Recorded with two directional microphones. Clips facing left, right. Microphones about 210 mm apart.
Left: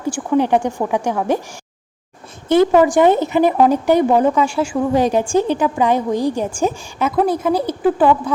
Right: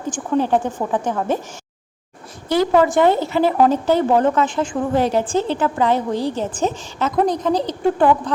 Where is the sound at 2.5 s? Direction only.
20° left (ahead or behind).